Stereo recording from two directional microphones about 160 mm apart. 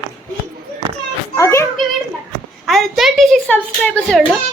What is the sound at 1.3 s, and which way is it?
Children playing, 20° left (ahead or behind).